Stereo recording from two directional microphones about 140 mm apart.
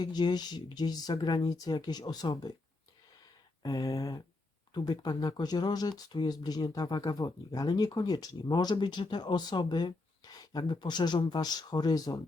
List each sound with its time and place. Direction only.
0.0 s speech: 30° left (ahead or behind)
3.6 s speech: 25° left (ahead or behind)